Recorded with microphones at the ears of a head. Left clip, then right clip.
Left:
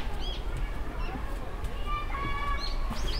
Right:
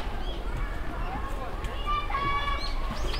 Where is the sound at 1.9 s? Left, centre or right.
Right.